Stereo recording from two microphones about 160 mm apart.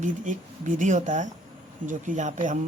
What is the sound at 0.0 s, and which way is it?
Speech, 50° right (ahead or behind).